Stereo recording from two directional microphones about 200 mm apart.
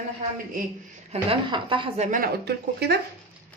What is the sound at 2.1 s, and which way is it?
Speech, 50° right (ahead or behind).